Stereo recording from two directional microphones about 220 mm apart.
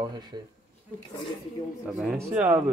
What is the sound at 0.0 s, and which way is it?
Speech, 20° right (ahead or behind).